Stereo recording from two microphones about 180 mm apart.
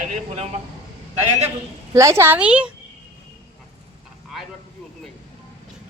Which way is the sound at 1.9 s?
15° right (ahead or behind).